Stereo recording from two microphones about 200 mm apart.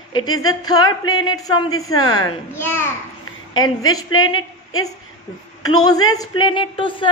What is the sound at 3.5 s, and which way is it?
A man's voice, 90° left.